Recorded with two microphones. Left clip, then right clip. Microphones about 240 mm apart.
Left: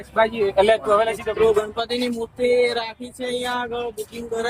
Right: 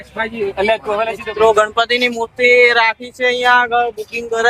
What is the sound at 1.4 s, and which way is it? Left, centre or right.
Speech, right.